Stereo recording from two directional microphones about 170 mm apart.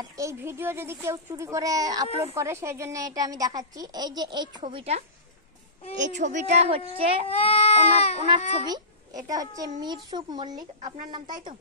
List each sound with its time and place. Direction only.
0.0 s speech: 15° right (ahead or behind); by 5.0 s 35° right (ahead or behind)
5.9 s a woman's voice: 45° right (ahead or behind)
7.2 s speech: 35° left (ahead or behind)
9.3 s speech: 20° right (ahead or behind)